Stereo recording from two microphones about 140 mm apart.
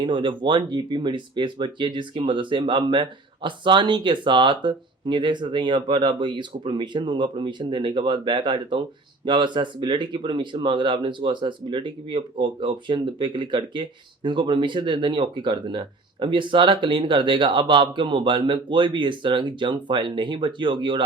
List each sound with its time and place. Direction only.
0.0 s speech: 35° right (ahead or behind)